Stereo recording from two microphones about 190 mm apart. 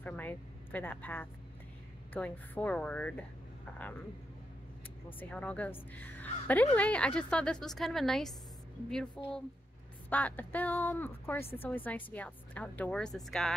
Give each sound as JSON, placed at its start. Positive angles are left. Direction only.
{"t": 0.0, "sound": "speech", "side_deg": 10}
{"t": 5.3, "sound": "a woman's voice", "side_deg": 10}